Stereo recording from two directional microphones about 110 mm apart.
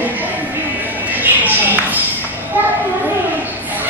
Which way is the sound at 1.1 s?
15° right (ahead or behind).